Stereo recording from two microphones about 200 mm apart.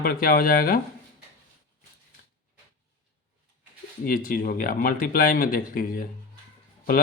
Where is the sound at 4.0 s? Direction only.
45° left (ahead or behind).